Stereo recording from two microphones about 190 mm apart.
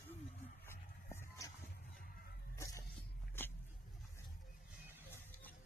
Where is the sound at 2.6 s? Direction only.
15° left (ahead or behind).